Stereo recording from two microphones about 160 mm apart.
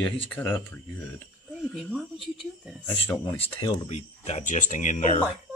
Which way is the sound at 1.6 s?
Centre (ahead or behind).